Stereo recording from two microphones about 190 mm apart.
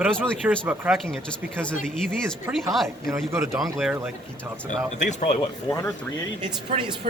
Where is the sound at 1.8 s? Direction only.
5° left (ahead or behind).